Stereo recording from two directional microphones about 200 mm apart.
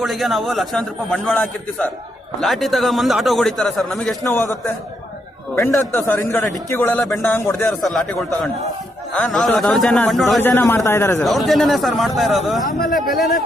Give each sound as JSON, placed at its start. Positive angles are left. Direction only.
{"t": 0.0, "sound": "a man's voice", "side_deg": 0}
{"t": 5.5, "sound": "a man's voice", "side_deg": 15}
{"t": 10.5, "sound": "a man's voice", "side_deg": 10}
{"t": 11.2, "sound": "a man's voice", "side_deg": 0}
{"t": 12.6, "sound": "speech", "side_deg": 45}
{"t": 13.0, "sound": "a man's voice", "side_deg": 0}